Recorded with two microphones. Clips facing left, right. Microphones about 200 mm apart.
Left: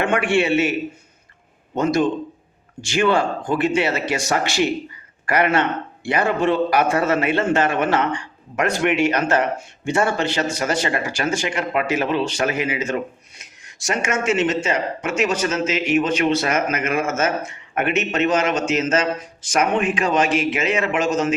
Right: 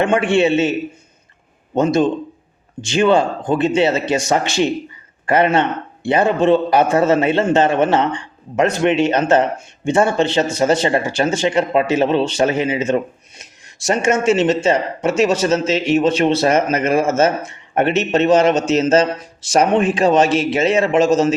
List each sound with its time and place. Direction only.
0.0 s a man's voice: 20° right (ahead or behind)